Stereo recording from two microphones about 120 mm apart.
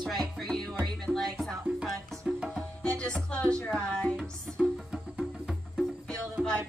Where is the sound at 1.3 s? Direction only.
5° right (ahead or behind).